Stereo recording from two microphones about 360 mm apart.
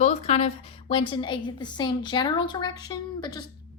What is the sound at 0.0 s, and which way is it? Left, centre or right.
A woman's voice, centre.